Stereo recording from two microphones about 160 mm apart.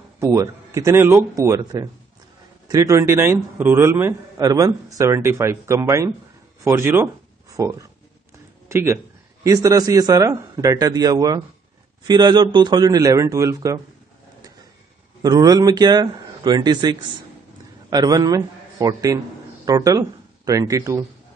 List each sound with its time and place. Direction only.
0.2 s a man's voice: 20° right (ahead or behind)
15.2 s a man's voice: 25° right (ahead or behind)